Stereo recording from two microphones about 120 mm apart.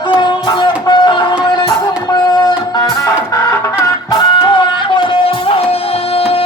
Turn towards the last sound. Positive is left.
turn(degrees=50)  # may be behind; listen again after turning